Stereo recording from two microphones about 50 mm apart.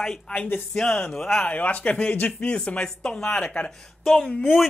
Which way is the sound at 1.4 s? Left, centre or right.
Left.